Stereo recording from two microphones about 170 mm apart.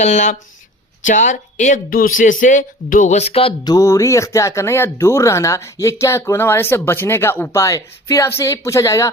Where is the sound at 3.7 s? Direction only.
20° left (ahead or behind).